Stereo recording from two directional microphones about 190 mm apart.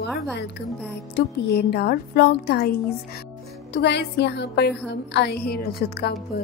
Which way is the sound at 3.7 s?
65° left (ahead or behind).